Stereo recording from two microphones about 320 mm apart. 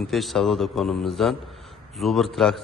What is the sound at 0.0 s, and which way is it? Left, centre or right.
A man's voice, centre.